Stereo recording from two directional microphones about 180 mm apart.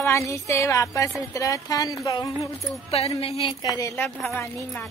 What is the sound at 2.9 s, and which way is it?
Speech, 35° left (ahead or behind).